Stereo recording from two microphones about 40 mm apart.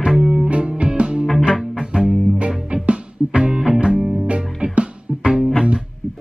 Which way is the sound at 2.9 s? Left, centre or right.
Right.